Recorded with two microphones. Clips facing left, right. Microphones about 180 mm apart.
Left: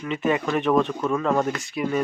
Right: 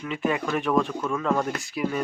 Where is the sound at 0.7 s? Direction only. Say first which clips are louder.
Left 2 dB; 20° left (ahead or behind).